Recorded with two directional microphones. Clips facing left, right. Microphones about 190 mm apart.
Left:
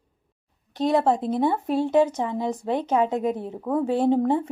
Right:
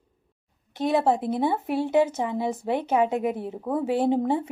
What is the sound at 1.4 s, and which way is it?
A woman's voice, 10° right (ahead or behind).